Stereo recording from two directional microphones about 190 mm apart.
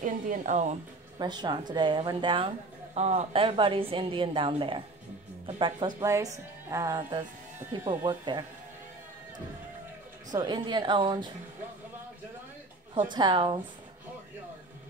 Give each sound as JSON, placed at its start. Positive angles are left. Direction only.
{"t": 0.0, "sound": "speech", "side_deg": -40}
{"t": 1.1, "sound": "a woman's voice", "side_deg": -20}
{"t": 10.3, "sound": "a woman's voice", "side_deg": -20}
{"t": 12.9, "sound": "a woman's voice", "side_deg": -25}